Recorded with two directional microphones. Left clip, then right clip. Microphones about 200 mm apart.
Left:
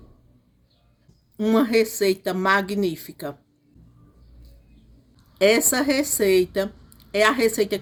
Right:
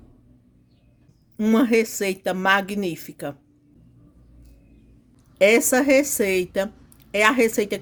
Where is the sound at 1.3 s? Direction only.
40° right (ahead or behind).